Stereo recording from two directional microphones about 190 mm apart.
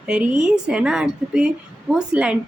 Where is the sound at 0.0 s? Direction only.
5° right (ahead or behind).